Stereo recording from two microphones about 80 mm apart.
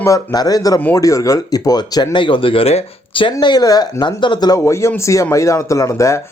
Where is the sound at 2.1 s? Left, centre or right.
Left.